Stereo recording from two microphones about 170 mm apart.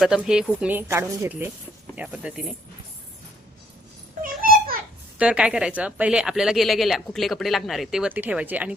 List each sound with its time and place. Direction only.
0.0 s speech: 5° right (ahead or behind)
2.0 s speech: 5° right (ahead or behind)
4.2 s a sound: 60° right (ahead or behind)
5.1 s speech: 5° right (ahead or behind)